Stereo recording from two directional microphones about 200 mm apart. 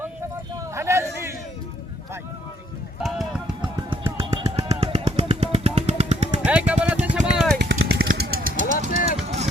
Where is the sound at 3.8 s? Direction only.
25° right (ahead or behind).